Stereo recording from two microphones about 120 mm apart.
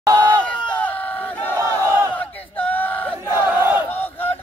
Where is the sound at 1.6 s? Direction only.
25° right (ahead or behind).